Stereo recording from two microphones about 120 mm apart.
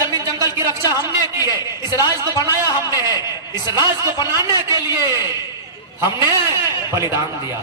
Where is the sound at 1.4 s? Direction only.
30° left (ahead or behind).